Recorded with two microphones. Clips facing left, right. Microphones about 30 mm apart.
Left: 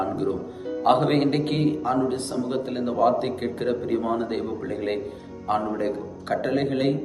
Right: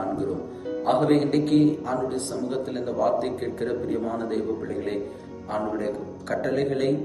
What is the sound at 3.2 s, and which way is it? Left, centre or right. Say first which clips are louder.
Speech: left 2 dB; left.